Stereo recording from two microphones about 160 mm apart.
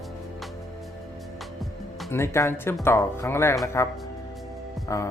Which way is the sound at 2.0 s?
15° left (ahead or behind).